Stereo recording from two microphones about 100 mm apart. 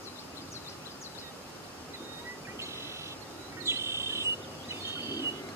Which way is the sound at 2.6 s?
25° right (ahead or behind).